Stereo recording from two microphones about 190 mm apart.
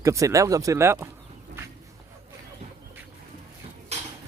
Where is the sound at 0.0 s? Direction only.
15° right (ahead or behind).